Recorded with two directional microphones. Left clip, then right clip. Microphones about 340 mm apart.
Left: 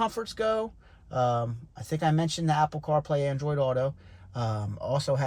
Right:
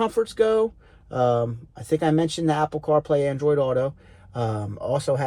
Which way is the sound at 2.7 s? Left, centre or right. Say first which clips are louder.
Right 7 dB; centre.